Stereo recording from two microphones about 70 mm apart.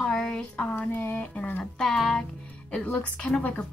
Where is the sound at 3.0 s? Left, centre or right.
Centre.